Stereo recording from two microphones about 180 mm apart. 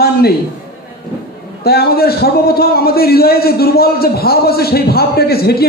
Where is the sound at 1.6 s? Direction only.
60° left (ahead or behind).